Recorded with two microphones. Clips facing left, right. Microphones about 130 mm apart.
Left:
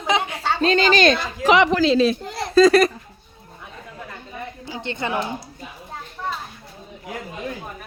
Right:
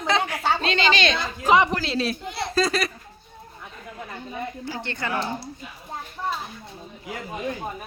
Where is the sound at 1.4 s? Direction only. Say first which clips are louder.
Left 1 dB; 90° left.